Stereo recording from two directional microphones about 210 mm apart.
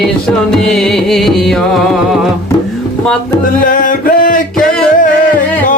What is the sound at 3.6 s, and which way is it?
Music, 40° left (ahead or behind).